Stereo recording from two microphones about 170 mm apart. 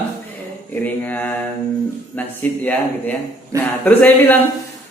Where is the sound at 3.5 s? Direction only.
20° right (ahead or behind).